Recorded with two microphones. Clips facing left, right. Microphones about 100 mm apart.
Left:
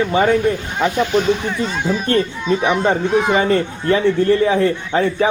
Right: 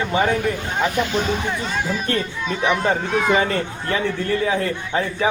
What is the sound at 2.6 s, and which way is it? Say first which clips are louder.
Speech: left 1 dB; 20° left (ahead or behind).